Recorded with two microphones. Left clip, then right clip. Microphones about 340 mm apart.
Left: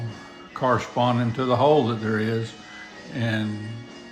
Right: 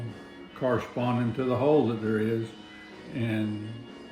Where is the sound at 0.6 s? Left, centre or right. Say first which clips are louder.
Left 6 dB; centre.